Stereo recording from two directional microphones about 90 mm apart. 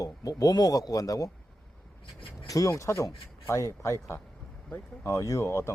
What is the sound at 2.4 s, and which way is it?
A man's voice, 40° left (ahead or behind).